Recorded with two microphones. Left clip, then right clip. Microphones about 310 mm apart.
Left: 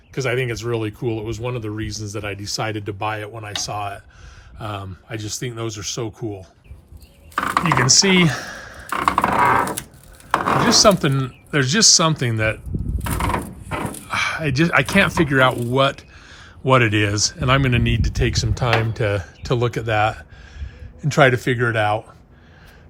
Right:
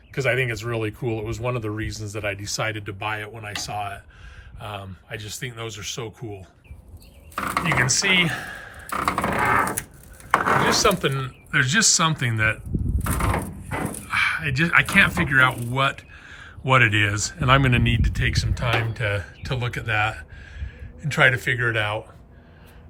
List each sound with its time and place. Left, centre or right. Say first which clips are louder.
0.1 s speech: even; centre
7.3 s chopping: left 5 dB; centre
7.6 s speech: left 5 dB; centre
8.9 s a sound: left 6 dB; centre
10.6 s speech: left 5 dB; centre
13.7 s speech: left 3 dB; centre